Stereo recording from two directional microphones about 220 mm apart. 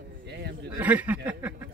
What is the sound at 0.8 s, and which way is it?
Speech, 5° right (ahead or behind).